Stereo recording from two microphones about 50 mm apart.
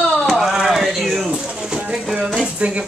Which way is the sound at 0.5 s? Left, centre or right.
Centre.